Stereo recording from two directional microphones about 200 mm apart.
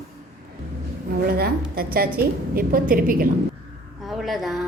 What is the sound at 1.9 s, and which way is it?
A woman's voice, 50° right (ahead or behind).